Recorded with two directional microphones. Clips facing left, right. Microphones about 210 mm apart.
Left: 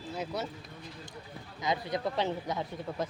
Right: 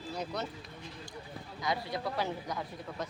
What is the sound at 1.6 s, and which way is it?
A man's voice, 20° left (ahead or behind).